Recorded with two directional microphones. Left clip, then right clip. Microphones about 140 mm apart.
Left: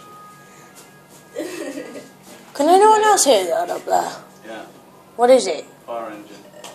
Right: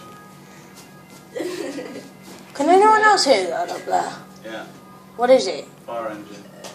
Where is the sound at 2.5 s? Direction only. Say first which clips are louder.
Left 2 dB; 70° left (ahead or behind).